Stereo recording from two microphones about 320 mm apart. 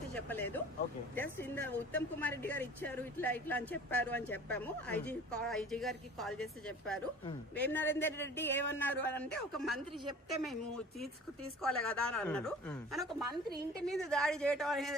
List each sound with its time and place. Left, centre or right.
0.3 s a man's voice: centre